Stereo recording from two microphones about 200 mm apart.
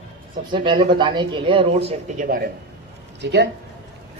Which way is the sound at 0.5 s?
25° right (ahead or behind).